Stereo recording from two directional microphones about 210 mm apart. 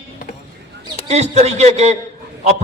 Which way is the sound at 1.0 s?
30° right (ahead or behind).